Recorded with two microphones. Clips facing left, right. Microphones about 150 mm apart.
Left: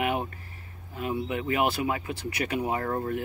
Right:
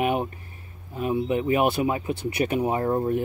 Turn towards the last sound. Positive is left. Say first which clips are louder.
# right 5 dB
turn(degrees=-20)  # may be behind; listen again after turning